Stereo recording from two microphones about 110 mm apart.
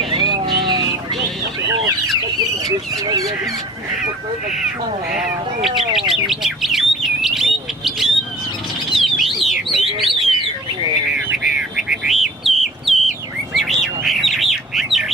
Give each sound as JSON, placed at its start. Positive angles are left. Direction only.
{"t": 0.1, "sound": "a sound", "side_deg": -45}
{"t": 5.1, "sound": "speech", "side_deg": -5}
{"t": 5.7, "sound": "bird", "side_deg": -50}
{"t": 6.1, "sound": "bird", "side_deg": -5}
{"t": 11.4, "sound": "bird", "side_deg": -5}